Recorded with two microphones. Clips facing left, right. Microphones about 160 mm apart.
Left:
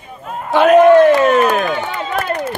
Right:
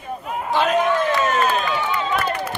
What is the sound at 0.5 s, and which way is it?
Run, 60° left (ahead or behind).